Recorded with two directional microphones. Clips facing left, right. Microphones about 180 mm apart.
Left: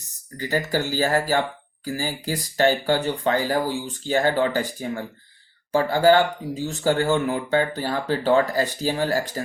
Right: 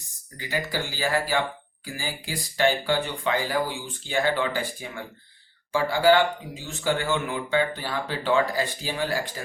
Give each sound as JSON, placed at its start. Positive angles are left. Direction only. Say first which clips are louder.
{"t": 0.3, "sound": "speech", "louder": "left 5 dB", "side_deg": 40}